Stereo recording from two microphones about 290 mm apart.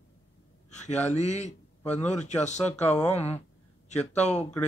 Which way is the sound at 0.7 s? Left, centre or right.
Left.